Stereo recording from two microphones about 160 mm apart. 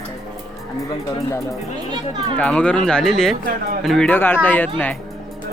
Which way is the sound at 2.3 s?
10° left (ahead or behind).